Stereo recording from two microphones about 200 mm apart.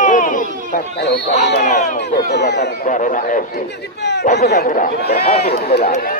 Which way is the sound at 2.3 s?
55° left (ahead or behind).